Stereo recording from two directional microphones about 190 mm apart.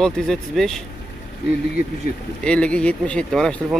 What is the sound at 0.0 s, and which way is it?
Speech, centre (ahead or behind).